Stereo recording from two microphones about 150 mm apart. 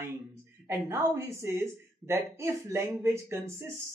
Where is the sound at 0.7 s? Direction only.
20° right (ahead or behind).